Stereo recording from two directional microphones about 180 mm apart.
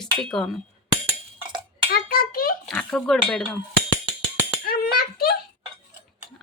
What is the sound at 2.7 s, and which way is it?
Speech, 5° left (ahead or behind).